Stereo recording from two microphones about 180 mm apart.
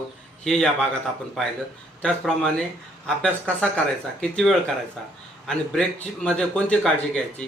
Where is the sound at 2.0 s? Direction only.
5° left (ahead or behind).